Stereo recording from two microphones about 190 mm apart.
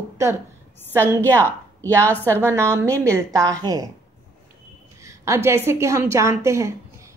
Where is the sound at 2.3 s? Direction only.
15° right (ahead or behind).